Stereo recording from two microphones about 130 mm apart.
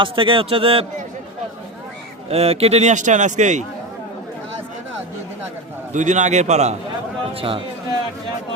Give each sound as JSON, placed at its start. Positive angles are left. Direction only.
{"t": 0.0, "sound": "speech", "side_deg": -40}
{"t": 2.3, "sound": "a man's voice", "side_deg": -50}
{"t": 5.9, "sound": "a man's voice", "side_deg": -70}
{"t": 7.3, "sound": "speech", "side_deg": -45}